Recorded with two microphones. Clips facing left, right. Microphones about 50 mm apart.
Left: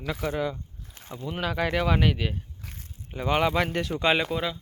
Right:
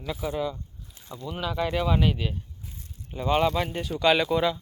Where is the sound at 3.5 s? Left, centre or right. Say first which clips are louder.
Left 2 dB; left.